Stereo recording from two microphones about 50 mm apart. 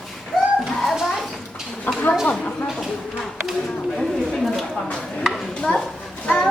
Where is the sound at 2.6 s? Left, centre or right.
Centre.